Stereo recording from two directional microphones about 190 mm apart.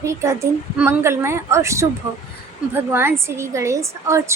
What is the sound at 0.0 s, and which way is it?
A woman's voice, 15° right (ahead or behind).